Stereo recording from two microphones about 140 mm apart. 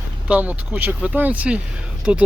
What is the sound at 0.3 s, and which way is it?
Speech, 10° right (ahead or behind).